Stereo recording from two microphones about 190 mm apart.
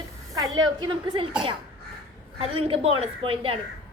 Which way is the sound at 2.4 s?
30° right (ahead or behind).